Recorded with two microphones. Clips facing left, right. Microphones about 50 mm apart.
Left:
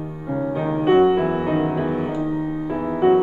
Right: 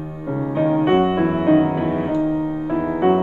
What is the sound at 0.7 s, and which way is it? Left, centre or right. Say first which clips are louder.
Music: left 3 dB; centre.